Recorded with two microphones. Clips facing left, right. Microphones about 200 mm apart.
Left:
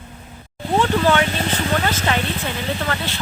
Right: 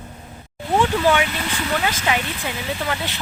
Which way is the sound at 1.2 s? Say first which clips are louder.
Left 4 dB; 40° left (ahead or behind).